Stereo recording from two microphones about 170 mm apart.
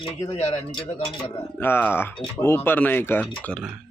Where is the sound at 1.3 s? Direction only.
15° left (ahead or behind).